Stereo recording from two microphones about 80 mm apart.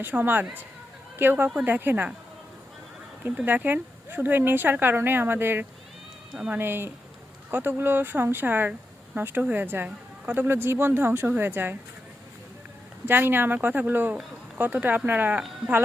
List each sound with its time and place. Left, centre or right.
0.0 s speech: right
3.4 s speech: right
13.1 s speech: right